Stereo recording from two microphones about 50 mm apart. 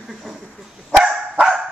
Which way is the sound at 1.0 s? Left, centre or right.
Centre.